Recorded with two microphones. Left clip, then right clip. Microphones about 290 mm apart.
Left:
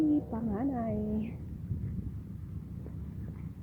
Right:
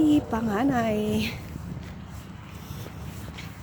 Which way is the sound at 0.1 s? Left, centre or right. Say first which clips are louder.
Right 8 dB; right.